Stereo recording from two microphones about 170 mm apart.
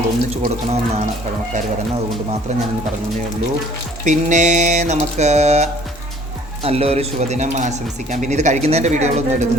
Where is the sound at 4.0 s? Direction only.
45° right (ahead or behind).